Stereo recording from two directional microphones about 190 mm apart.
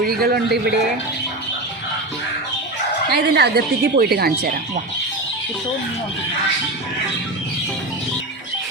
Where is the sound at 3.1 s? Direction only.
55° right (ahead or behind).